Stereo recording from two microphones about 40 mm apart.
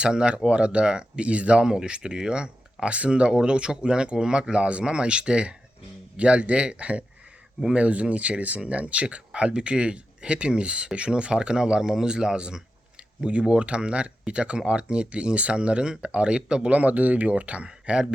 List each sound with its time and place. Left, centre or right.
0.0 s speech: right
16.6 s speech: right
17.7 s speech: right